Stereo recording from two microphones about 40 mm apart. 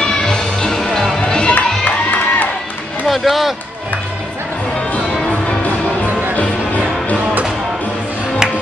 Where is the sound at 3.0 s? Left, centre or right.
Centre.